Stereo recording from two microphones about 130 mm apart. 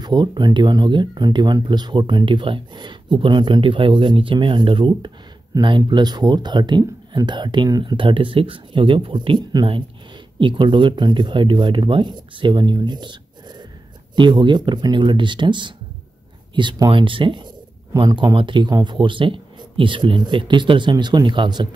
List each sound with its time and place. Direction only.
0.0 s speech: 35° right (ahead or behind)